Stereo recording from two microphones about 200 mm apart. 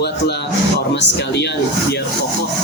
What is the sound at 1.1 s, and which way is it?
Speech, 60° left (ahead or behind).